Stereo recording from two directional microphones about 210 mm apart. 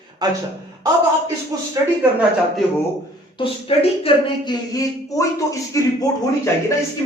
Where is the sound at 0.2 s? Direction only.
20° right (ahead or behind).